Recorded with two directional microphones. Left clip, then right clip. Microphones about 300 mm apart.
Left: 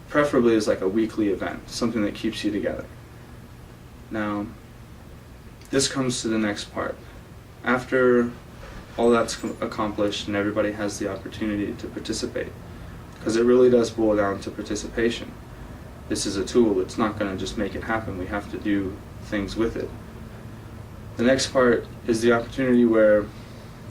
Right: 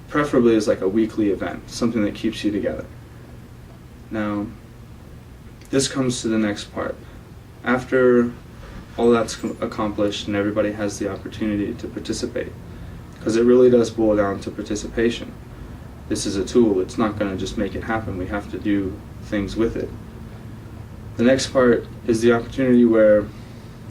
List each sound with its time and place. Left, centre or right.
0.1 s speech: centre
4.1 s speech: centre
5.7 s speech: centre
21.2 s speech: centre